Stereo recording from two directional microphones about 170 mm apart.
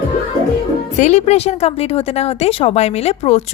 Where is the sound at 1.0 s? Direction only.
40° left (ahead or behind).